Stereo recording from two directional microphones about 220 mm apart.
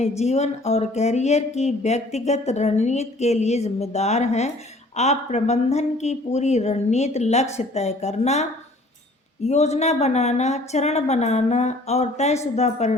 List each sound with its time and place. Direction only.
0.2 s speech: 30° left (ahead or behind)